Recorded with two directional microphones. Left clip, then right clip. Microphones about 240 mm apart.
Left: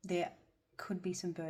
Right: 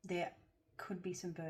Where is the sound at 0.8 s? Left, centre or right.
Left.